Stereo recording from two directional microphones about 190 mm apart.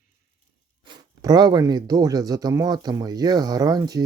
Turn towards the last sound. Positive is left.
turn(degrees=-20)  # may be behind; listen again after turning